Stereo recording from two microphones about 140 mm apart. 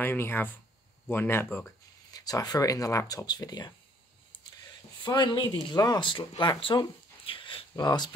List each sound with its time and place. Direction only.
0.0 s speech: 15° left (ahead or behind)
2.0 s speech: 25° left (ahead or behind)
5.0 s speech: 35° left (ahead or behind)